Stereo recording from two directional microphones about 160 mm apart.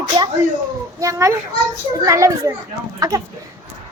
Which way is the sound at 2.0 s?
20° right (ahead or behind).